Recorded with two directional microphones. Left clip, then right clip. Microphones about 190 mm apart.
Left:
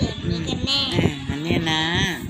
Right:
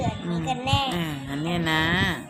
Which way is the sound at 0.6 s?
80° right.